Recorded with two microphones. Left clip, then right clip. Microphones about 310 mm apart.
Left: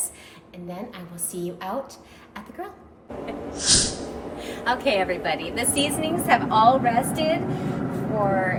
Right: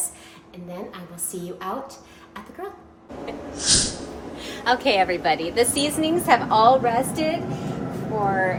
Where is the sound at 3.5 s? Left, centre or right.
Centre.